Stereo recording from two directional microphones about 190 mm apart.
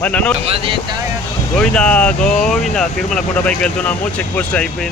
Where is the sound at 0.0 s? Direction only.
5° left (ahead or behind).